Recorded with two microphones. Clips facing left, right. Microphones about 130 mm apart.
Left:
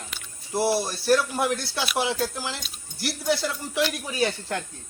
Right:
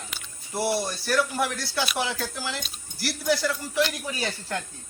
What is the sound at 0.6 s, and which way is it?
Speech, 25° left (ahead or behind).